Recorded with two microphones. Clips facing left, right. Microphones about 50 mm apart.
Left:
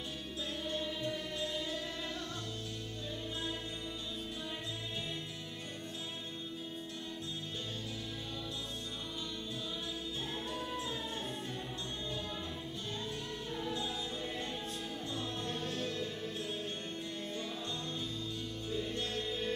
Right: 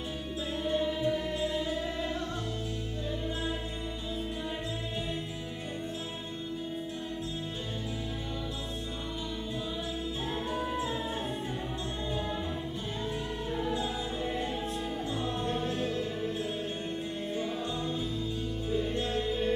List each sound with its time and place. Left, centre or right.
0.7 s music: centre
10.5 s music: centre
13.5 s music: centre
18.7 s music: centre